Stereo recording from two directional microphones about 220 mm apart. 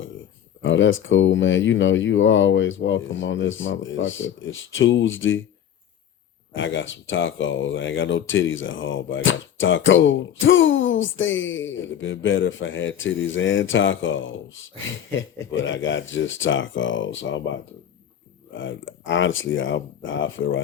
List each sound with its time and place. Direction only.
0.6 s speech: 60° left (ahead or behind)
6.5 s speech: 60° left (ahead or behind)
18.5 s speech: 60° left (ahead or behind)